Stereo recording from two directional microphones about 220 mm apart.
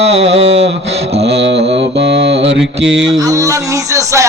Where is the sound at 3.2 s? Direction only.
15° right (ahead or behind).